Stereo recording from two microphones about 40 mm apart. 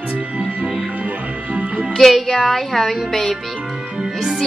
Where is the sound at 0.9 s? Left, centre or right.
Right.